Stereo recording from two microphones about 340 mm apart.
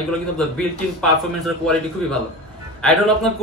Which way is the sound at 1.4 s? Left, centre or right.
Centre.